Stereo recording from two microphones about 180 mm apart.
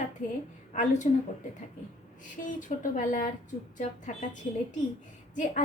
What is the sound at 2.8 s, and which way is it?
A woman's voice, 45° left (ahead or behind).